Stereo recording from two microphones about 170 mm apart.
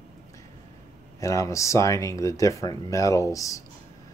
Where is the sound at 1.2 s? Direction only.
20° left (ahead or behind).